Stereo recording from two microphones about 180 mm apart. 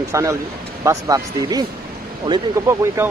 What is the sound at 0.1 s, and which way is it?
Speech, 15° right (ahead or behind).